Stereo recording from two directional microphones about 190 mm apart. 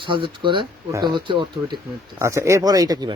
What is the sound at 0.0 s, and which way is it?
Speech, 25° right (ahead or behind).